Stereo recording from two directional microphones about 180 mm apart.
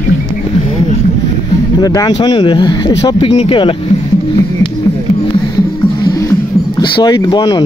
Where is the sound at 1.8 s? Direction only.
20° left (ahead or behind).